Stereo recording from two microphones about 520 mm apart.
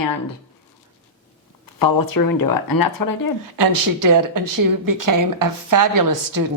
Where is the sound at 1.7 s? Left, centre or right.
Left.